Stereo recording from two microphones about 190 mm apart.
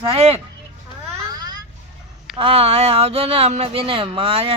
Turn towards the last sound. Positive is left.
turn(degrees=-30)  # may be behind; listen again after turning